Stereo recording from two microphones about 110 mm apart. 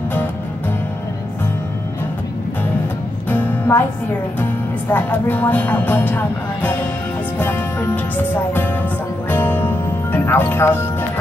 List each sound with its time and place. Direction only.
3.3 s music: 15° left (ahead or behind)
4.4 s speech: 15° left (ahead or behind)
9.3 s music: 20° left (ahead or behind)